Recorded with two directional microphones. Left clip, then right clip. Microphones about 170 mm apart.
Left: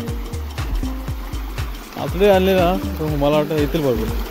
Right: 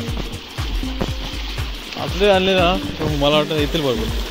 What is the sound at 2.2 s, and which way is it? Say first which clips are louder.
Speech: left 1 dB; 35° left (ahead or behind).